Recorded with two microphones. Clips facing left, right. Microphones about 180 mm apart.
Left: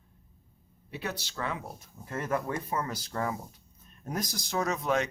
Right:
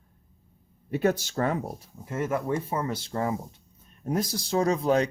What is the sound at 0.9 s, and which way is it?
Speech, 50° right (ahead or behind).